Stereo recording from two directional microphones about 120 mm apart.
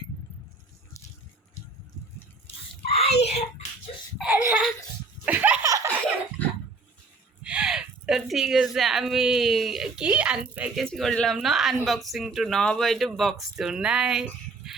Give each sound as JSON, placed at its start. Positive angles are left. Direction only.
{"t": 2.8, "sound": "a child's voice", "side_deg": 55}
{"t": 4.3, "sound": "speech", "side_deg": -15}
{"t": 5.2, "sound": "laughter", "side_deg": -15}
{"t": 5.6, "sound": "laughter", "side_deg": -25}
{"t": 7.4, "sound": "a woman's voice", "side_deg": -5}
{"t": 10.8, "sound": "speech", "side_deg": 0}